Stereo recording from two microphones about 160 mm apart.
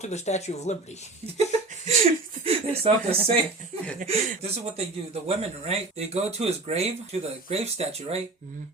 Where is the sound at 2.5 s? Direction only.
35° right (ahead or behind).